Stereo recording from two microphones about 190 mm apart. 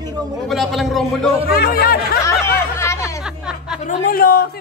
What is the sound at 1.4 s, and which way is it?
Speech, 55° left (ahead or behind).